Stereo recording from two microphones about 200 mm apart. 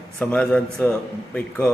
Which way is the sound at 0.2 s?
5° left (ahead or behind).